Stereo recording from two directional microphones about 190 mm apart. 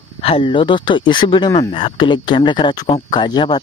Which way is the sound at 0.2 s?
30° left (ahead or behind).